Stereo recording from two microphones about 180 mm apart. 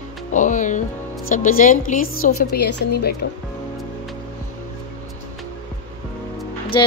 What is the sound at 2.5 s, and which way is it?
Speech, 65° left (ahead or behind).